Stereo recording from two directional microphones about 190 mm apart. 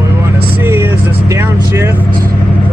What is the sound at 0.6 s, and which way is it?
Vehicle, 10° right (ahead or behind).